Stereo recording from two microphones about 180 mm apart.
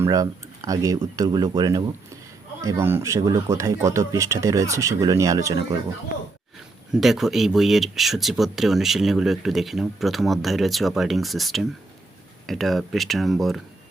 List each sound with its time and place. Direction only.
0.0 s speech: 20° right (ahead or behind)
6.9 s speech: centre (ahead or behind)